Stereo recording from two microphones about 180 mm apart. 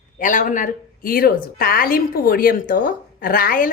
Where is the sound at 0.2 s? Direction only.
45° left (ahead or behind).